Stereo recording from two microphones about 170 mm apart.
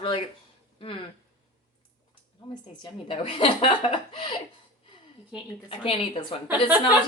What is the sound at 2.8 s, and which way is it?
A woman's voice, 30° left (ahead or behind).